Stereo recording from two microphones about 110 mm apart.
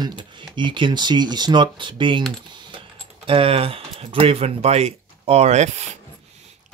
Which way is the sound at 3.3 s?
60° right (ahead or behind).